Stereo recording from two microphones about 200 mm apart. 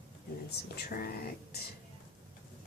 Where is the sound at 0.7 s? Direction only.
50° left (ahead or behind).